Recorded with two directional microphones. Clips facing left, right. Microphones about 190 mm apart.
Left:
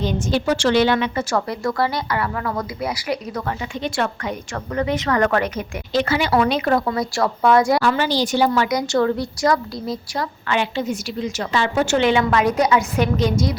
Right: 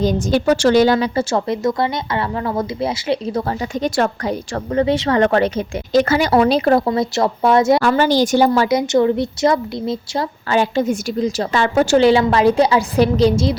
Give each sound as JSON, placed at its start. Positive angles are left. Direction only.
{"t": 0.0, "sound": "a woman's voice", "side_deg": -45}
{"t": 3.8, "sound": "a woman's voice", "side_deg": -40}
{"t": 5.9, "sound": "speech", "side_deg": -45}
{"t": 7.8, "sound": "a woman's voice", "side_deg": -45}
{"t": 8.9, "sound": "a woman's voice", "side_deg": -20}
{"t": 10.5, "sound": "a woman's voice", "side_deg": -45}
{"t": 11.9, "sound": "speech", "side_deg": -35}